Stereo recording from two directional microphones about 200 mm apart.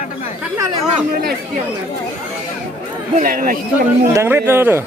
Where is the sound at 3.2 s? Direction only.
45° right (ahead or behind).